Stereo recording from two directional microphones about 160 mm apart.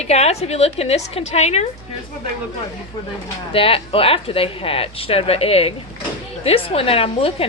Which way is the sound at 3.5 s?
35° left (ahead or behind).